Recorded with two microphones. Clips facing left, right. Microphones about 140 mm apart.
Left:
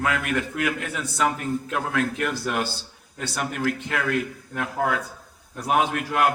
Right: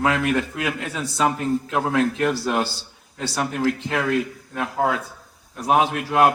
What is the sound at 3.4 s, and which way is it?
A man's voice, 20° right (ahead or behind).